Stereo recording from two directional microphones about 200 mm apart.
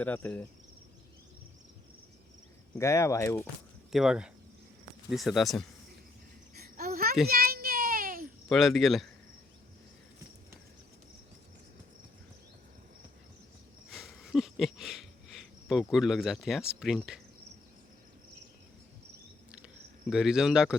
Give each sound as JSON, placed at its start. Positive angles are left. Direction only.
{"t": 0.0, "sound": "speech", "side_deg": 10}
{"t": 2.7, "sound": "speech", "side_deg": 15}
{"t": 3.9, "sound": "cricket", "side_deg": -5}
{"t": 6.6, "sound": "a sound", "side_deg": -50}
{"t": 7.3, "sound": "child singing", "side_deg": -50}
{"t": 8.4, "sound": "cricket", "side_deg": 0}
{"t": 13.9, "sound": "a sound", "side_deg": 0}
{"t": 15.6, "sound": "cricket", "side_deg": 0}
{"t": 20.1, "sound": "cricket", "side_deg": -5}